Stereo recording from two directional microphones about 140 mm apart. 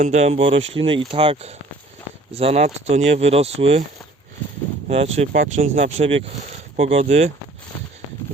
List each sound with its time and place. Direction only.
0.0 s speech: 50° right (ahead or behind)
4.9 s speech: 50° right (ahead or behind)